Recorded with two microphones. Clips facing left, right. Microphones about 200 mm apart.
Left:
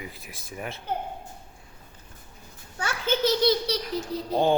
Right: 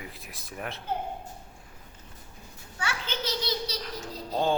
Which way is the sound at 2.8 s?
50° left (ahead or behind).